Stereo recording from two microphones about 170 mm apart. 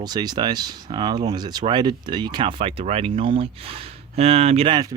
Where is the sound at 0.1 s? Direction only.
25° right (ahead or behind).